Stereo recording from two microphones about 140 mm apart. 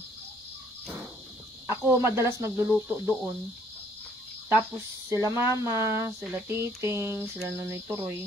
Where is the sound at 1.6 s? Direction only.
20° right (ahead or behind).